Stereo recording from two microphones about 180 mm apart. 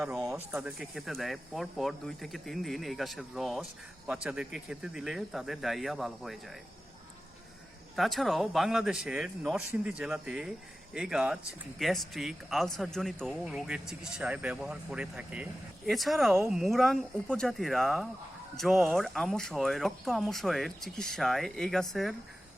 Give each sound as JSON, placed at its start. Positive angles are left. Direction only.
{"t": 0.5, "sound": "speech", "side_deg": 0}
{"t": 7.9, "sound": "speech", "side_deg": 0}